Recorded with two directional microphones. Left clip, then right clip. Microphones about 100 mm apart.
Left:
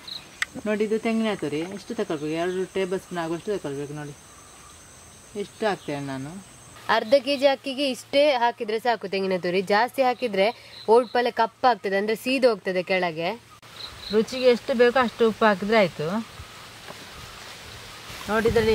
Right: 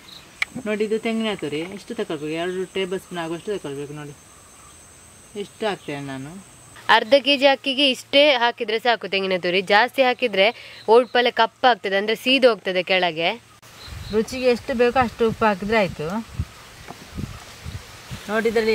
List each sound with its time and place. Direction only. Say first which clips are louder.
0.7 s speech: right 1 dB; 5° left (ahead or behind)
5.4 s speech: even; 10° left (ahead or behind)
6.9 s a woman's voice: right 5 dB; 35° right (ahead or behind)
14.1 s speech: even; 15° left (ahead or behind)
18.2 s speech: right 1 dB; 20° left (ahead or behind)